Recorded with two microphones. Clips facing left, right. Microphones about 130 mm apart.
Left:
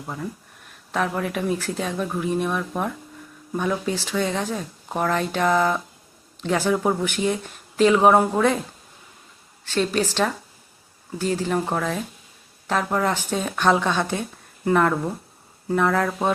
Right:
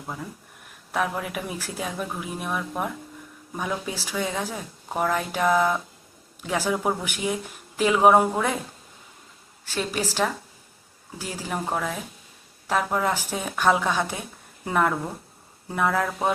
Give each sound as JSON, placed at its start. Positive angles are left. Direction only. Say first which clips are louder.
{"t": 0.9, "sound": "a woman's voice", "louder": "left 3 dB", "side_deg": -10}
{"t": 9.6, "sound": "a woman's voice", "louder": "left 6 dB", "side_deg": -10}